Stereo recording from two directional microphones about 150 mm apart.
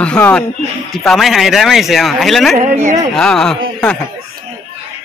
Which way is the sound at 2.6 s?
50° right (ahead or behind).